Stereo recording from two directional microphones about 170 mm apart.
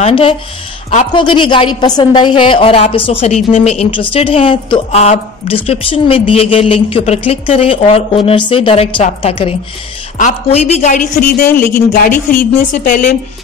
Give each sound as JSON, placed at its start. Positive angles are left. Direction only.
{"t": 0.0, "sound": "a woman's voice", "side_deg": 30}
{"t": 10.1, "sound": "a woman's voice", "side_deg": 45}
{"t": 11.1, "sound": "a woman's voice", "side_deg": 65}